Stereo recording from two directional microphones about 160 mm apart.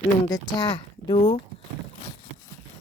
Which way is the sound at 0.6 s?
25° left (ahead or behind).